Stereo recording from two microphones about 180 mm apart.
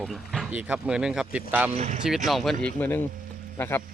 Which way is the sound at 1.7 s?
35° right (ahead or behind).